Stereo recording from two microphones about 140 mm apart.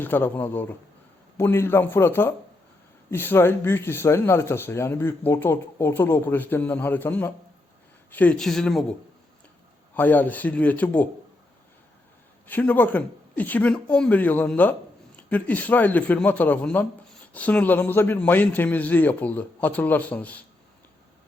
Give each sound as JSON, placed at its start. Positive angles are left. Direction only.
{"t": 0.0, "sound": "speech", "side_deg": 15}
{"t": 12.5, "sound": "speech", "side_deg": 10}